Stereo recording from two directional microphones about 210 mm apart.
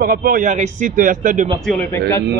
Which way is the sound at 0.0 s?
40° right (ahead or behind).